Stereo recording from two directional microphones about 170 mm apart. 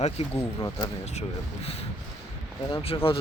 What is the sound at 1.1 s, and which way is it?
Speech, 35° left (ahead or behind).